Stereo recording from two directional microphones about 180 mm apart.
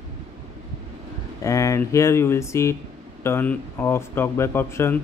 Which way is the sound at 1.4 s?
15° left (ahead or behind).